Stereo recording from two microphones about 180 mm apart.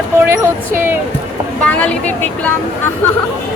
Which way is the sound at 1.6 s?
5° left (ahead or behind).